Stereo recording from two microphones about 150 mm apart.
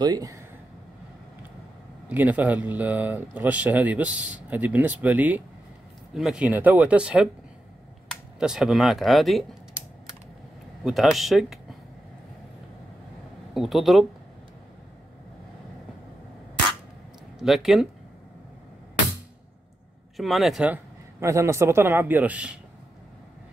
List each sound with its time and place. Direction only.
0.0 s speech: 25° right (ahead or behind)
2.0 s speech: 10° right (ahead or behind)
8.4 s speech: 5° right (ahead or behind)
10.8 s speech: centre (ahead or behind)
13.6 s speech: centre (ahead or behind)
17.4 s speech: centre (ahead or behind)
20.2 s speech: centre (ahead or behind)